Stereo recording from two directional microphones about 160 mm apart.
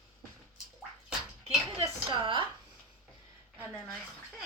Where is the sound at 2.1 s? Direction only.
30° right (ahead or behind).